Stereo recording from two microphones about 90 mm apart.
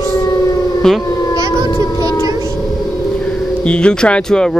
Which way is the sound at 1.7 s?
45° left (ahead or behind).